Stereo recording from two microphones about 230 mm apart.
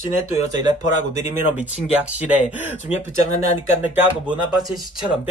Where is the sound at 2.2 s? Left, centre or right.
Centre.